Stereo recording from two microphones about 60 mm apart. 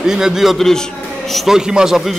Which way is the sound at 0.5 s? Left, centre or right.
Centre.